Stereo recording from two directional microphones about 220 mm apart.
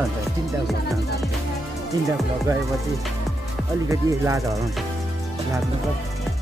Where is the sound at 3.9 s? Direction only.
15° right (ahead or behind).